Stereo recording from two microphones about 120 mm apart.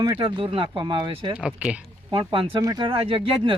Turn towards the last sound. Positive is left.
turn(degrees=-45)  # may be behind; listen again after turning